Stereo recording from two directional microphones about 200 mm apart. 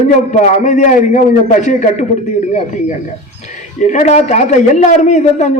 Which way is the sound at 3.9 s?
35° left (ahead or behind).